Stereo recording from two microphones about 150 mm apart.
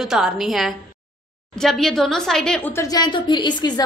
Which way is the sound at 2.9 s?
30° left (ahead or behind).